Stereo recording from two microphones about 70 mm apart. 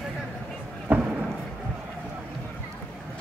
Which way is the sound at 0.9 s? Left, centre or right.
Right.